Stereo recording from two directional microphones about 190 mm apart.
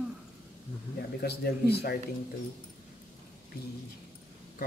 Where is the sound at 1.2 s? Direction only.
60° left (ahead or behind).